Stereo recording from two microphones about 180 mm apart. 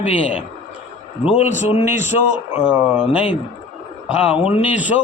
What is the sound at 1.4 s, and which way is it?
Speech, 40° left (ahead or behind).